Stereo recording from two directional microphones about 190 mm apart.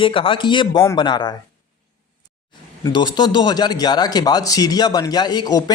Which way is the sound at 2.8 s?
20° left (ahead or behind).